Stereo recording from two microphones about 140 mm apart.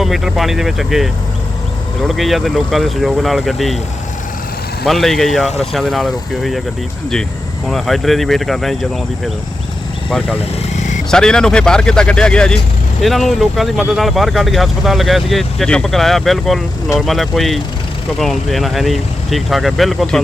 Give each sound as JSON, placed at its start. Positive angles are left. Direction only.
{"t": 0.0, "sound": "speech", "side_deg": 0}
{"t": 4.9, "sound": "speech", "side_deg": 0}
{"t": 7.7, "sound": "speech", "side_deg": 0}
{"t": 10.8, "sound": "a sound", "side_deg": 60}
{"t": 11.1, "sound": "speech", "side_deg": 5}